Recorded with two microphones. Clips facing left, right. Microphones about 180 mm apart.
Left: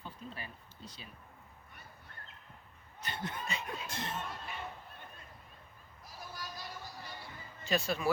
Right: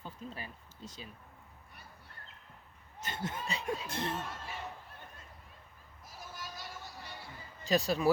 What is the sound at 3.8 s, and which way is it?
Speech, 60° right (ahead or behind).